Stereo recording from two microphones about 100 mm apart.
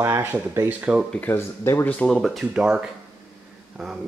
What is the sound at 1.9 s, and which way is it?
Speech, 10° left (ahead or behind).